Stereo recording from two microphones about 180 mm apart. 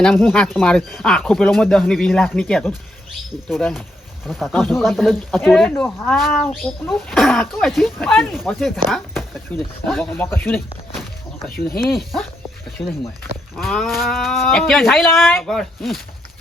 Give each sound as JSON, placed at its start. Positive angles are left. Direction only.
{"t": 0.0, "sound": "speech", "side_deg": 5}
{"t": 11.5, "sound": "speech", "side_deg": 55}
{"t": 12.8, "sound": "speech", "side_deg": 30}
{"t": 13.6, "sound": "speech", "side_deg": 0}